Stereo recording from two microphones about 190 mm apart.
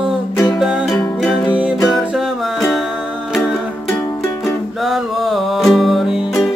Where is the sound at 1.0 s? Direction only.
Centre (ahead or behind).